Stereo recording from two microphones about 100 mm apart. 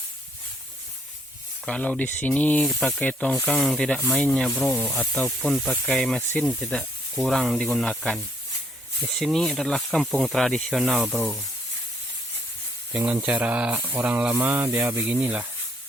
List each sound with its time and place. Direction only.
1.6 s speech: 10° left (ahead or behind)
2.6 s speech: centre (ahead or behind)
3.0 s speech: 15° left (ahead or behind)
3.5 s speech: centre (ahead or behind)
13.2 s speech: 15° right (ahead or behind)